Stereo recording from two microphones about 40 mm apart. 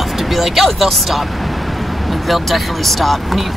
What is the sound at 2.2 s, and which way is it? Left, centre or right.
Speech, centre.